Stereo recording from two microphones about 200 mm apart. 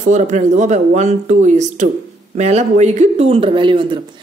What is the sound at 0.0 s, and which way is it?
A woman's voice, 35° right (ahead or behind).